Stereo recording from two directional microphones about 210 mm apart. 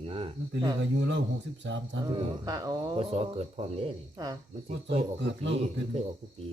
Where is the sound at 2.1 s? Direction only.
20° right (ahead or behind).